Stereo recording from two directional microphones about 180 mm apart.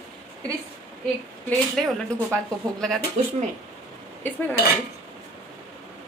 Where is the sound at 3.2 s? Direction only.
40° right (ahead or behind).